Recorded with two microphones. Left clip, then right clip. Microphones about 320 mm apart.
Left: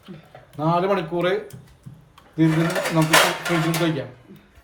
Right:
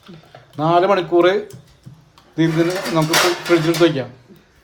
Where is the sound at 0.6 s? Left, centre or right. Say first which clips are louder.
Right 6 dB; right.